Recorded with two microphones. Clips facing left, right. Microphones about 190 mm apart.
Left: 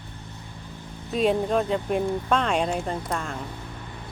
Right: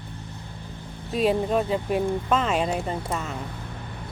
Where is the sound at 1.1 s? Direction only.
Centre (ahead or behind).